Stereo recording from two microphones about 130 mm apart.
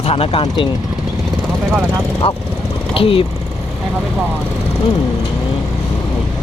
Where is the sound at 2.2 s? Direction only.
50° left (ahead or behind).